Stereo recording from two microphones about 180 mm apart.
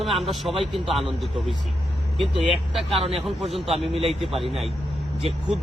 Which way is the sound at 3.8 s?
30° right (ahead or behind).